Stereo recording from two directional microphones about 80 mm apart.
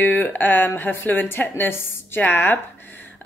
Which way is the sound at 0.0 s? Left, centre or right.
Left.